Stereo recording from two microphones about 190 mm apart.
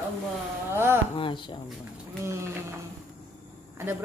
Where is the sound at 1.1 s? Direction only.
25° left (ahead or behind).